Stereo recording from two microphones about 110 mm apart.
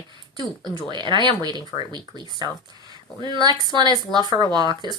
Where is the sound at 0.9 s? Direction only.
45° right (ahead or behind).